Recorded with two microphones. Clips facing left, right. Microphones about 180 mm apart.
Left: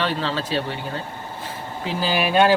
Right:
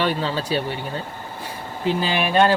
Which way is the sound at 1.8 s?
Centre (ahead or behind).